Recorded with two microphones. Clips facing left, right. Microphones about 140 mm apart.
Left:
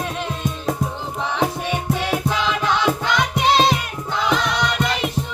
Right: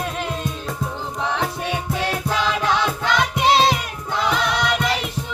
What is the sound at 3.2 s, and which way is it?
Music, 5° right (ahead or behind).